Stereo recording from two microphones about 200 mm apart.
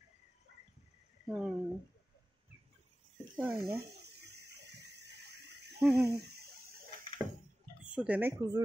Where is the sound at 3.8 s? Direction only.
55° right (ahead or behind).